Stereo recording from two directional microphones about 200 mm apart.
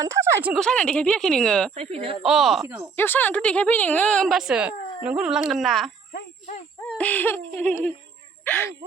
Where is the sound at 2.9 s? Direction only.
10° left (ahead or behind).